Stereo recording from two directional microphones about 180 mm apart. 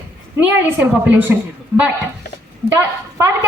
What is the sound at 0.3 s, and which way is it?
Speech, 10° right (ahead or behind).